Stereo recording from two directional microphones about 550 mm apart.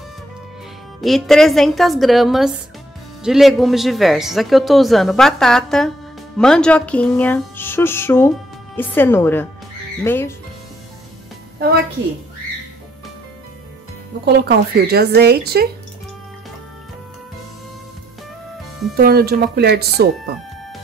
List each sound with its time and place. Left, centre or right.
1.0 s speech: centre
14.2 s speech: centre
18.9 s speech: centre